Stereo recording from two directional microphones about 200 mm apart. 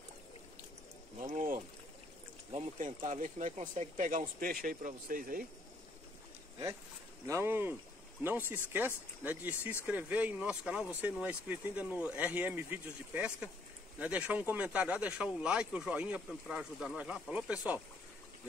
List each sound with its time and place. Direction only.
1.2 s pour: 40° right (ahead or behind)
2.5 s speech: 35° right (ahead or behind)
7.2 s speech: 15° right (ahead or behind)